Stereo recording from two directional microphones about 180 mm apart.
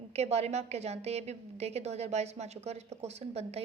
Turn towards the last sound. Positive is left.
turn(degrees=-35)  # may be behind; listen again after turning